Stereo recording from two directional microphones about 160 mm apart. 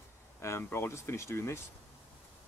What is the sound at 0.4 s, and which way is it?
Speech, 15° left (ahead or behind).